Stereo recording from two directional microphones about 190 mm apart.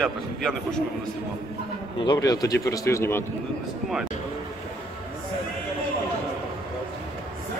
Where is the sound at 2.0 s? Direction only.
20° left (ahead or behind).